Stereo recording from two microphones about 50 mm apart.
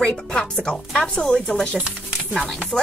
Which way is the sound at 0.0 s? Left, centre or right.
Centre.